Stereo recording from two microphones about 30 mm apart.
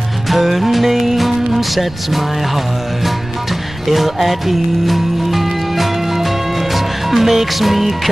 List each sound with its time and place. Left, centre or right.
0.3 s music: centre